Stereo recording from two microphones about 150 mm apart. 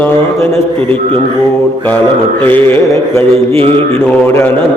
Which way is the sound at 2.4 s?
15° left (ahead or behind).